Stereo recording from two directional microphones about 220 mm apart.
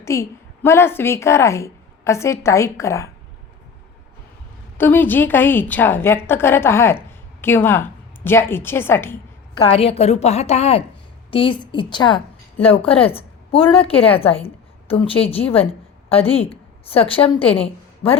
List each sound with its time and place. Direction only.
0.0 s a woman's voice: 10° left (ahead or behind)
4.8 s a woman's voice: 10° left (ahead or behind)
9.6 s a woman's voice: 25° left (ahead or behind)